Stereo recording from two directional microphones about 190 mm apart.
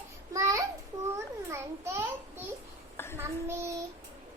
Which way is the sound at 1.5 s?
15° right (ahead or behind).